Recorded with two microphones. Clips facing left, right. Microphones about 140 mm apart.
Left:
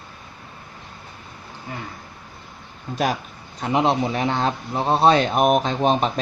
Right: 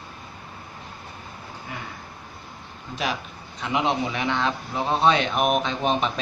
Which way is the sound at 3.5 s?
40° left (ahead or behind).